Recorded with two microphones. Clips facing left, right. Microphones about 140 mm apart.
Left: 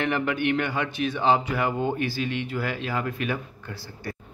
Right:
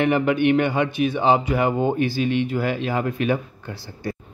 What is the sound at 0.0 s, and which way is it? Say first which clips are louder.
Speech: right 7 dB; 20° right (ahead or behind).